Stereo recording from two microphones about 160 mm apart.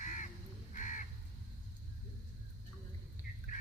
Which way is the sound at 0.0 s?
50° left (ahead or behind).